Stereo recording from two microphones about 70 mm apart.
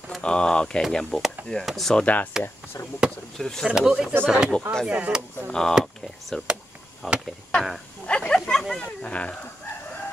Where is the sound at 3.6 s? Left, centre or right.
Centre.